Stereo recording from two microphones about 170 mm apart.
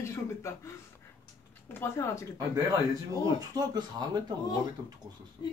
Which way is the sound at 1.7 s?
15° left (ahead or behind).